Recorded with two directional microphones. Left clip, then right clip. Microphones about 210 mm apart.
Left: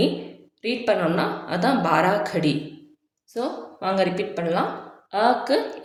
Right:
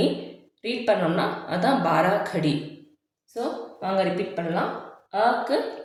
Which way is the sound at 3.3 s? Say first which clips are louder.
Left 1 dB; 40° left (ahead or behind).